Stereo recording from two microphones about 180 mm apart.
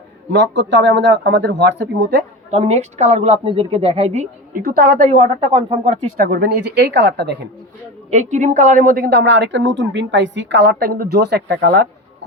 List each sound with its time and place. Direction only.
0.3 s speech: 80° right
2.5 s a woman's voice: 35° right (ahead or behind)
4.6 s a woman's voice: 55° right (ahead or behind)
6.1 s speech: 55° right (ahead or behind)
8.1 s a woman's voice: 40° right (ahead or behind); by 11.9 s 65° right (ahead or behind)